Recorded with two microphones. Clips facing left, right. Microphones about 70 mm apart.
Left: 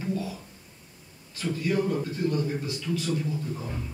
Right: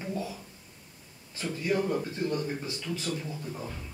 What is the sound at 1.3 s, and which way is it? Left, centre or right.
A man's voice, right.